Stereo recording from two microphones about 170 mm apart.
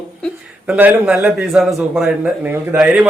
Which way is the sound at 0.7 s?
10° right (ahead or behind).